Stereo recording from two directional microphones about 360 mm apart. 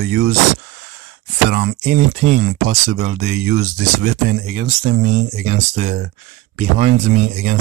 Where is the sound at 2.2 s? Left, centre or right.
Right.